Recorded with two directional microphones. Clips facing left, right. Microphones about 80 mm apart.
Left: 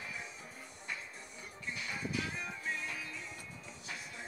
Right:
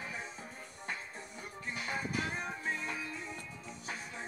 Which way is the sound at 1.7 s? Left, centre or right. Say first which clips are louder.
Right 2 dB; right.